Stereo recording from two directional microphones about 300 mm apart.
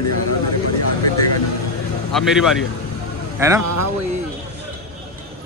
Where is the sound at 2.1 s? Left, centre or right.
Centre.